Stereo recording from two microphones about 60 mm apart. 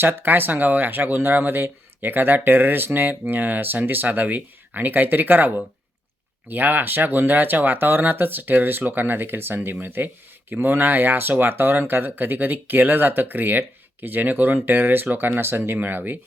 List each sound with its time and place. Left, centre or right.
0.0 s speech: right
6.5 s speech: right